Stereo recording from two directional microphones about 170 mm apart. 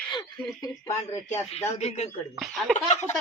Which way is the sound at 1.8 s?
40° left (ahead or behind).